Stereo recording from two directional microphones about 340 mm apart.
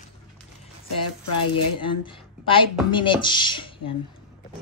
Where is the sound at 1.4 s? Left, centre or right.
Left.